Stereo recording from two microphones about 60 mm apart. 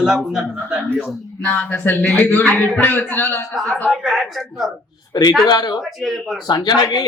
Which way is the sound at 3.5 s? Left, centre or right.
Centre.